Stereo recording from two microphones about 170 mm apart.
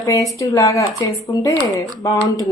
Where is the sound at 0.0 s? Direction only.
20° left (ahead or behind).